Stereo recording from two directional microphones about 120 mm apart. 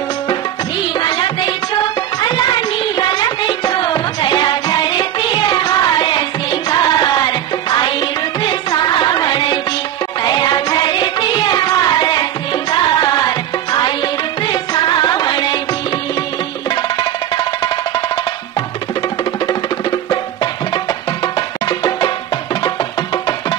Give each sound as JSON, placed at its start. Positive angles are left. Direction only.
{"t": 0.9, "sound": "music", "side_deg": 40}
{"t": 17.4, "sound": "music", "side_deg": 40}
{"t": 21.4, "sound": "music", "side_deg": 40}